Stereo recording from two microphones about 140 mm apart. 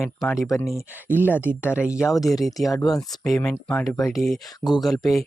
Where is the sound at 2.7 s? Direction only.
25° left (ahead or behind).